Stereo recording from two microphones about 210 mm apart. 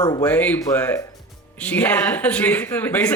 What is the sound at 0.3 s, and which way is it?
A man's voice, 5° left (ahead or behind).